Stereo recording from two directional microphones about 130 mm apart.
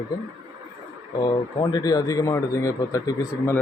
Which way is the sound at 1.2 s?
35° left (ahead or behind).